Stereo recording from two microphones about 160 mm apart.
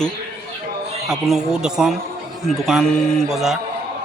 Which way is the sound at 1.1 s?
Centre (ahead or behind).